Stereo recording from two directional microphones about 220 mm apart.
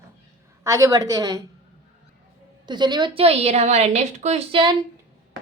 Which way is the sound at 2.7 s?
20° right (ahead or behind).